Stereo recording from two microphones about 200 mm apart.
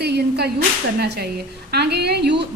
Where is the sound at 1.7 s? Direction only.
55° right (ahead or behind).